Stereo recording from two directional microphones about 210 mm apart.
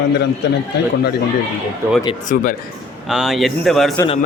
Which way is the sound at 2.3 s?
40° left (ahead or behind).